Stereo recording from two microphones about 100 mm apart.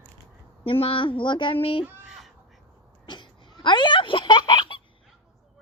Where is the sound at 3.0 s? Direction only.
50° left (ahead or behind).